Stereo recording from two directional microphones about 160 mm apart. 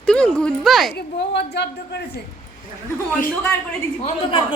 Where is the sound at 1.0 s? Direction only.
90° left.